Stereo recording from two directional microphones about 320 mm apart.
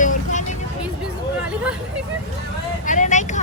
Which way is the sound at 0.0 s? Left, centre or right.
Left.